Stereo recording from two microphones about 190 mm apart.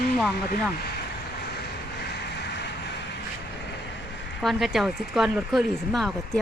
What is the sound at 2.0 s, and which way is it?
Vehicle, 65° left (ahead or behind).